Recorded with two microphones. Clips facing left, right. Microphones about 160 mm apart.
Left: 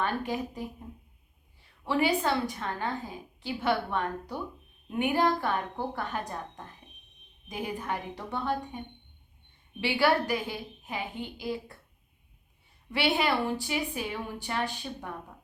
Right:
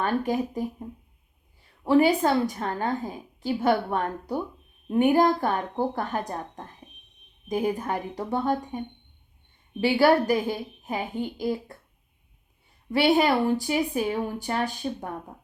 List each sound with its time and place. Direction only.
0.0 s a woman's voice: 45° right (ahead or behind)
1.8 s a woman's voice: 45° right (ahead or behind)
7.4 s a woman's voice: 45° right (ahead or behind)
9.8 s a woman's voice: 40° right (ahead or behind)
12.9 s a woman's voice: 45° right (ahead or behind)